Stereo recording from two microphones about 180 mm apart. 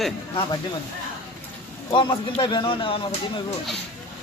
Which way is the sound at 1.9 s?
30° left (ahead or behind).